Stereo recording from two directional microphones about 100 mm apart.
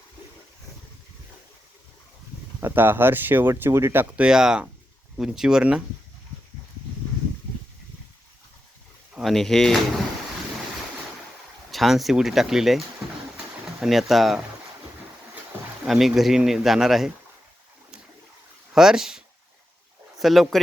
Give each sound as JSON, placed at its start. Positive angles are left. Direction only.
{"t": 2.6, "sound": "speech", "side_deg": -20}
{"t": 4.0, "sound": "speech", "side_deg": -10}
{"t": 9.1, "sound": "speech", "side_deg": 0}
{"t": 11.7, "sound": "speech", "side_deg": 0}
{"t": 13.8, "sound": "speech", "side_deg": 0}
{"t": 15.9, "sound": "speech", "side_deg": 0}
{"t": 18.7, "sound": "speech", "side_deg": -5}